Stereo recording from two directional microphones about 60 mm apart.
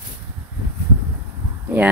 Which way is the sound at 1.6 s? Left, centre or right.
Right.